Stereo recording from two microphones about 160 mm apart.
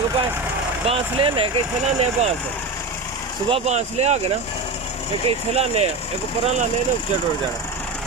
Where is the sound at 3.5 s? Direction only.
40° right (ahead or behind).